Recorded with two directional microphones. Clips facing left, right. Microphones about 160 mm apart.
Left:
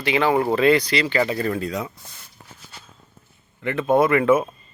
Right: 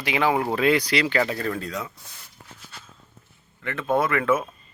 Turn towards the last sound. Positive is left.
turn(degrees=20)  # may be behind; listen again after turning